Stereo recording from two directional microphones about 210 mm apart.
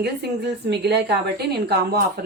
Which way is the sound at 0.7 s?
55° right (ahead or behind).